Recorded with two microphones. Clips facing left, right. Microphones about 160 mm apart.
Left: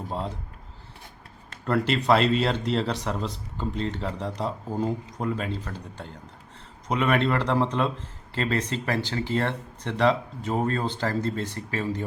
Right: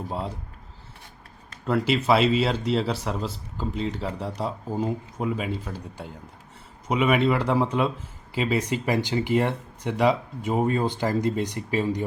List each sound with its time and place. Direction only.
0.1 s a man's voice: 5° right (ahead or behind)
1.6 s a man's voice: 5° right (ahead or behind)